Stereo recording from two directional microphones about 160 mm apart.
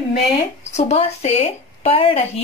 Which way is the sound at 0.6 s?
45° left (ahead or behind).